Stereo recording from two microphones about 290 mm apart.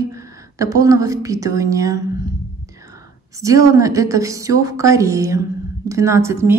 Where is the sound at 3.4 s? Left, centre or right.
Centre.